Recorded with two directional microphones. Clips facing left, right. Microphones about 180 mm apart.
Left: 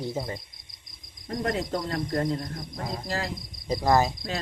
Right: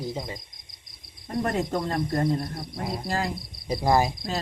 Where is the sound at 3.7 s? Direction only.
10° right (ahead or behind).